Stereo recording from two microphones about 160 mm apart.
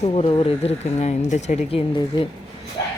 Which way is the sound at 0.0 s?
40° left (ahead or behind).